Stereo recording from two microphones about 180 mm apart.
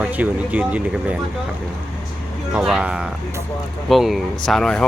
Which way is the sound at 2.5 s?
5° right (ahead or behind).